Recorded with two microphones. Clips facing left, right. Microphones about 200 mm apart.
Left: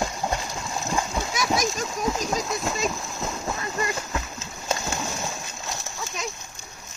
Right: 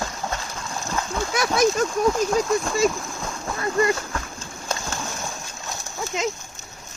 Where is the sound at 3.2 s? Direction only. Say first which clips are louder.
Even; 5° left (ahead or behind).